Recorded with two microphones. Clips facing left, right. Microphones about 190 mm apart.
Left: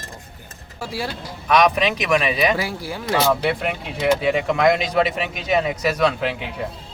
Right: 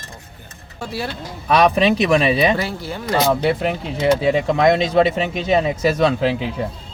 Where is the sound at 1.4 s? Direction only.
30° right (ahead or behind).